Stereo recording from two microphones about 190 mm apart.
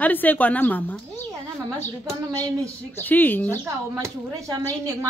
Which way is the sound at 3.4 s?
15° right (ahead or behind).